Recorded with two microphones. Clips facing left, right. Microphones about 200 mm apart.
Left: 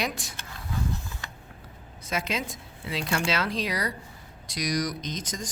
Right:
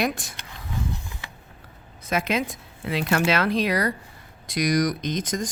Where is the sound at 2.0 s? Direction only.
55° right (ahead or behind).